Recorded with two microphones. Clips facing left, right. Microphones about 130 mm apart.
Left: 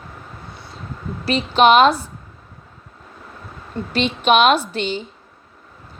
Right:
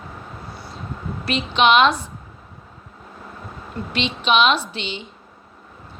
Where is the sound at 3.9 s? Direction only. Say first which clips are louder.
Left 4 dB; 45° left (ahead or behind).